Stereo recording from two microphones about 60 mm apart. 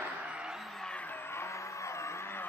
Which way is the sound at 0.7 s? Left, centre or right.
Centre.